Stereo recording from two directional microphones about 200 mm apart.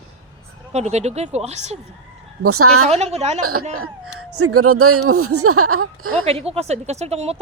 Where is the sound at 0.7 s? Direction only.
35° right (ahead or behind).